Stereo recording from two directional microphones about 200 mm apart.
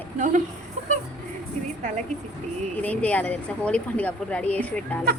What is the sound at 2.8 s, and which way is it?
Speech, 5° left (ahead or behind).